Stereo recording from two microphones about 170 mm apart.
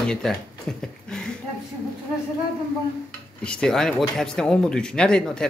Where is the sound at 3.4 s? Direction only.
5° left (ahead or behind).